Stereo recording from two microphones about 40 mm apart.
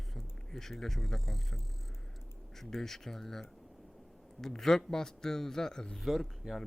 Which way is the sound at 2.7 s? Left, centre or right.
Centre.